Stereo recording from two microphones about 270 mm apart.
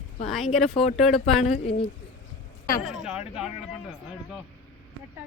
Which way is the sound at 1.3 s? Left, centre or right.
Left.